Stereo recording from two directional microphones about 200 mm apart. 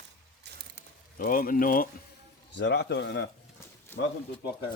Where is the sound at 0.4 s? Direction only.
55° right (ahead or behind).